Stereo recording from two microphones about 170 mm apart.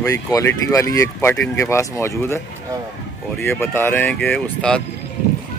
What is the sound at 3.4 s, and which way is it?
Speech, 15° left (ahead or behind).